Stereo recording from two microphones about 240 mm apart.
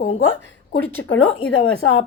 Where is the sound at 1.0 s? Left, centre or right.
Left.